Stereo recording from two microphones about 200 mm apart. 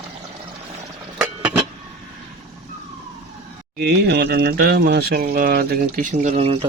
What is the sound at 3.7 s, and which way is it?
Speech, 55° right (ahead or behind).